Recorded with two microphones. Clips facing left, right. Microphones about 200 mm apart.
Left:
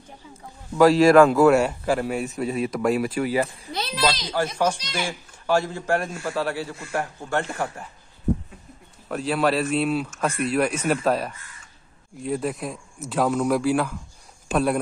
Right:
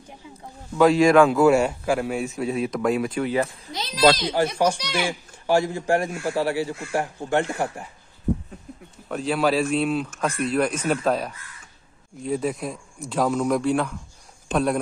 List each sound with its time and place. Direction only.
0.7 s a man's voice: centre (ahead or behind)
4.0 s speech: 50° right (ahead or behind)
4.7 s a child's voice: 70° right (ahead or behind)
5.5 s a man's voice: 15° right (ahead or behind)
9.1 s a man's voice: centre (ahead or behind)